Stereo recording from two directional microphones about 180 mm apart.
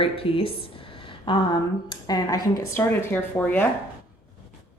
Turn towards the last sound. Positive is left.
turn(degrees=10)  # may be behind; listen again after turning